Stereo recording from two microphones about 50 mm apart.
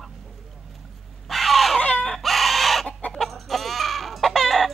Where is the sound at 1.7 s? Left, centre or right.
Left.